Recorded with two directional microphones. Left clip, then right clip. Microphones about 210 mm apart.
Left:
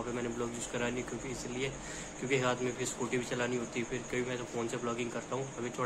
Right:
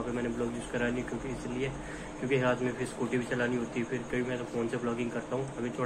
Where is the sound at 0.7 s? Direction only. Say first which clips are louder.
Right 3 dB; 15° left (ahead or behind).